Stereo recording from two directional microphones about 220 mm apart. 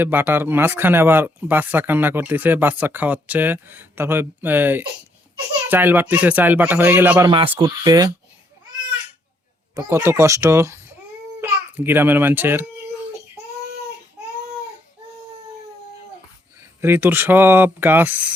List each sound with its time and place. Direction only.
0.0 s speech: 10° right (ahead or behind)
7.3 s speech: 20° right (ahead or behind)
9.7 s speech: 10° right (ahead or behind)
16.6 s speech: 10° right (ahead or behind)